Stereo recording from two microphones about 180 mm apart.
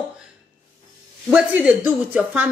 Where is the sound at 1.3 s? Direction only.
5° right (ahead or behind).